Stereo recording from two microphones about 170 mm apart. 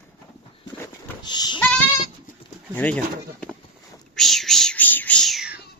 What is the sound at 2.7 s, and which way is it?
Speech, 10° left (ahead or behind).